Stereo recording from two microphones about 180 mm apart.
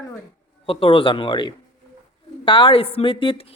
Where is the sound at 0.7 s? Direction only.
30° left (ahead or behind).